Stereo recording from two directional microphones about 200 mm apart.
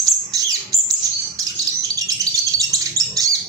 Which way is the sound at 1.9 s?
15° right (ahead or behind).